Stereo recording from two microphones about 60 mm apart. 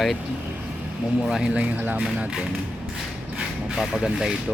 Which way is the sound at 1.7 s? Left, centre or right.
Right.